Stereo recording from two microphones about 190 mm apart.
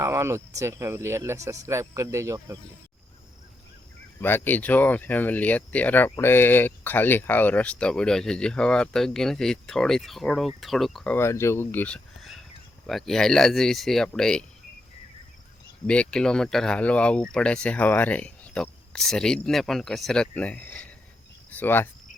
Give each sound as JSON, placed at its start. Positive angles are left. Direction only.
{"t": 0.0, "sound": "speech", "side_deg": -15}
{"t": 4.2, "sound": "speech", "side_deg": 10}
{"t": 15.9, "sound": "speech", "side_deg": 5}
{"t": 21.5, "sound": "cricket", "side_deg": 10}